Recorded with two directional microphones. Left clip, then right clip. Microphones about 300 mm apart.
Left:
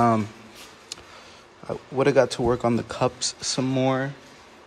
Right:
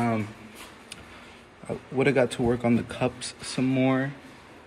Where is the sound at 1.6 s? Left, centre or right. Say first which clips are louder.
Left 3 dB; centre.